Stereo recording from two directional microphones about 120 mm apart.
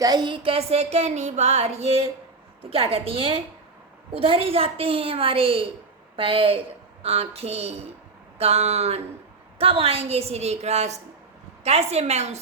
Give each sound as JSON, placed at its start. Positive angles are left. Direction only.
{"t": 0.0, "sound": "a woman's voice", "side_deg": -35}
{"t": 9.6, "sound": "speech", "side_deg": -50}